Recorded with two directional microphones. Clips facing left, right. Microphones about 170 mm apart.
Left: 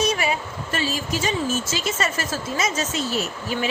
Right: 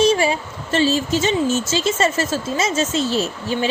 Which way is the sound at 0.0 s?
30° right (ahead or behind).